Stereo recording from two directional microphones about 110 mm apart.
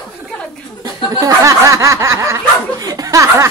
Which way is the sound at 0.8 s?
30° right (ahead or behind).